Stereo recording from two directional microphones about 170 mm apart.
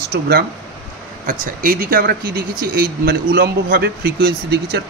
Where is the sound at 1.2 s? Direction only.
55° right (ahead or behind).